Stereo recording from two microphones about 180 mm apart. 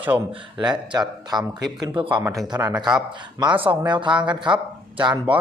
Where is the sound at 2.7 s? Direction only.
5° right (ahead or behind).